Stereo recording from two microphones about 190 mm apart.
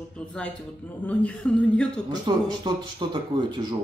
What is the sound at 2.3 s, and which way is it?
Speech, 20° right (ahead or behind).